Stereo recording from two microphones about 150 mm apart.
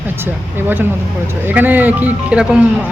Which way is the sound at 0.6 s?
15° right (ahead or behind).